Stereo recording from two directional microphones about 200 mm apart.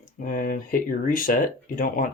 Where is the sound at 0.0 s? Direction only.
40° left (ahead or behind).